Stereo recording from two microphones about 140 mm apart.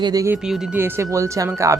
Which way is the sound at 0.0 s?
25° right (ahead or behind).